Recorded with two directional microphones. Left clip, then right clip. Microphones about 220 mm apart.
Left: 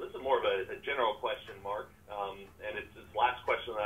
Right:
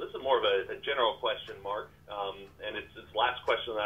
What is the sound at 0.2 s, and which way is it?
Speech, 45° right (ahead or behind).